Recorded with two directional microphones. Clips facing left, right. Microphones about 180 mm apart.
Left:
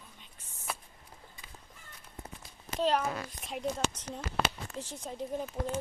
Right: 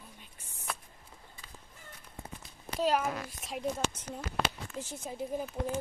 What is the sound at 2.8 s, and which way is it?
A child's voice, 5° right (ahead or behind).